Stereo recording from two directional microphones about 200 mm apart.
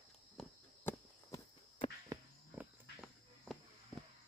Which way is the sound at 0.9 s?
10° left (ahead or behind).